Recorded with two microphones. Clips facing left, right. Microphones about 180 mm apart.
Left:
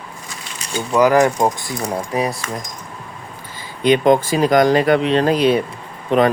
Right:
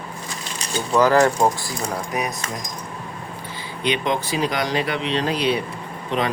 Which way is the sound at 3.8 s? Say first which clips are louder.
Left 9 dB; 45° left (ahead or behind).